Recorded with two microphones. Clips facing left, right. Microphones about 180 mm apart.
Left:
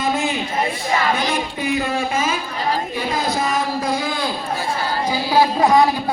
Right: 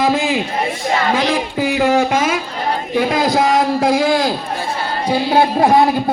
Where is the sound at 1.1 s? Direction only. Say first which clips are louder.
Right 5 dB; 80° right.